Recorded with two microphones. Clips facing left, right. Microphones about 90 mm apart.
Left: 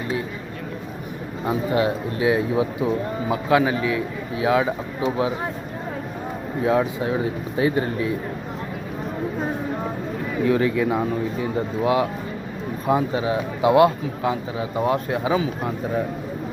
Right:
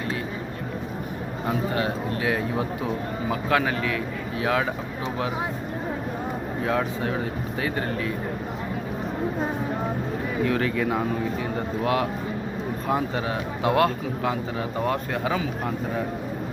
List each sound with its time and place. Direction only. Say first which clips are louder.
1.5 s a man's voice: left 5 dB; 15° left (ahead or behind)
6.7 s a man's voice: left 5 dB; 10° left (ahead or behind)
10.4 s a man's voice: left 5 dB; 5° left (ahead or behind)